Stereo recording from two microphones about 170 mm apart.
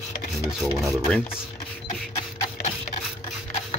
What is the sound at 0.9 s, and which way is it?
Speech, 5° left (ahead or behind).